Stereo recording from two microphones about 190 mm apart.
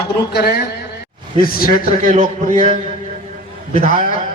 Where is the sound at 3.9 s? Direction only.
45° left (ahead or behind).